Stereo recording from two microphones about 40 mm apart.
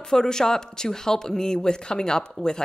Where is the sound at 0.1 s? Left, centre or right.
Centre.